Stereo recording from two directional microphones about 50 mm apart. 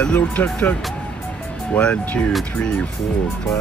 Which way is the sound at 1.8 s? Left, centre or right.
Left.